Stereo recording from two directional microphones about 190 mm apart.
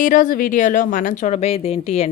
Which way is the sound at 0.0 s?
45° left (ahead or behind).